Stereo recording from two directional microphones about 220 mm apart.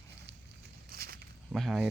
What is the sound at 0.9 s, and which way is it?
Walk, 45° right (ahead or behind).